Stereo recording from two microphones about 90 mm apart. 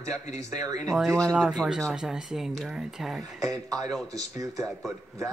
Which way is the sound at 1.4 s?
5° right (ahead or behind).